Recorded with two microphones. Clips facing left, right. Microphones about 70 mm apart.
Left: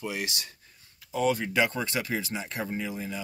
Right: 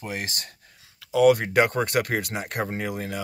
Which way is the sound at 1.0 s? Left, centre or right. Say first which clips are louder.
Right 9 dB; right.